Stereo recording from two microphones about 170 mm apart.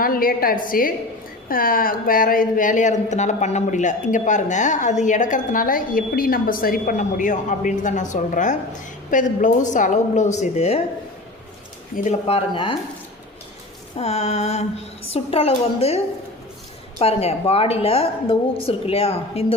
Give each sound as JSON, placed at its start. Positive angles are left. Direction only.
{"t": 0.0, "sound": "a woman's voice", "side_deg": 60}
{"t": 12.3, "sound": "a woman's voice", "side_deg": 30}
{"t": 13.9, "sound": "a woman's voice", "side_deg": 40}
{"t": 17.0, "sound": "a woman's voice", "side_deg": 35}